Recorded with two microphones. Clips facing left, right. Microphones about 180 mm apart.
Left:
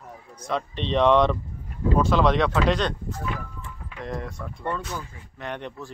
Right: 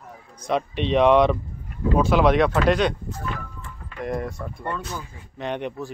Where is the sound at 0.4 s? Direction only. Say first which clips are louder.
Right 4 dB; 15° right (ahead or behind).